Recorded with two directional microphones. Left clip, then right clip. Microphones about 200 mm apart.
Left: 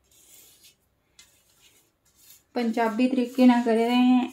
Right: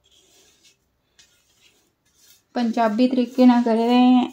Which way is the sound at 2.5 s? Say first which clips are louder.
Right 5 dB; 35° right (ahead or behind).